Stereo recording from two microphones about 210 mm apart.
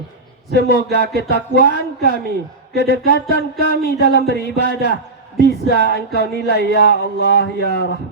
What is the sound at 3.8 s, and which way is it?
Speech, 50° left (ahead or behind).